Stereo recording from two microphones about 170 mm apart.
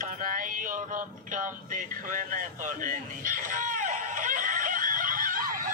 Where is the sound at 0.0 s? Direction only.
50° right (ahead or behind).